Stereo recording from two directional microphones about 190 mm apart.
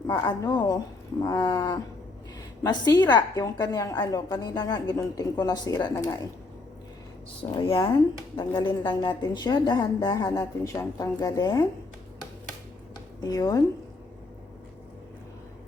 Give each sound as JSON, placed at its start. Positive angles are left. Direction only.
{"t": 0.1, "sound": "a woman's voice", "side_deg": 20}
{"t": 7.5, "sound": "a woman's voice", "side_deg": 25}
{"t": 13.2, "sound": "a woman's voice", "side_deg": 20}